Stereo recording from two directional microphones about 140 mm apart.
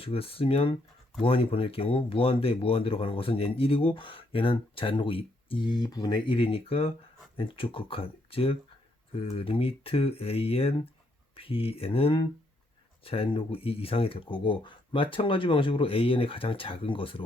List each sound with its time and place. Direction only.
0.0 s speech: 45° left (ahead or behind)